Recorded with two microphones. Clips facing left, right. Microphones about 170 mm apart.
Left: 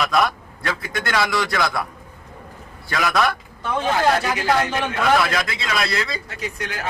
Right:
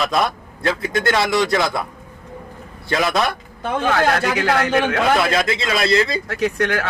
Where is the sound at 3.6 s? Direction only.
65° right (ahead or behind).